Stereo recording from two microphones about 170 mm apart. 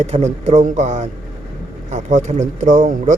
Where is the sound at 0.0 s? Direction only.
40° right (ahead or behind).